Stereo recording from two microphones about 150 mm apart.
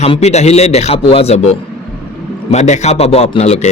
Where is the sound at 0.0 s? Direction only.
45° left (ahead or behind).